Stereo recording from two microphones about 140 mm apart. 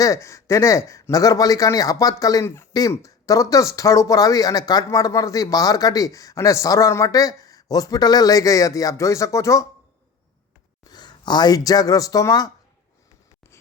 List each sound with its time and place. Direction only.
0.0 s a man's voice: 20° left (ahead or behind)
10.8 s speech: 30° left (ahead or behind)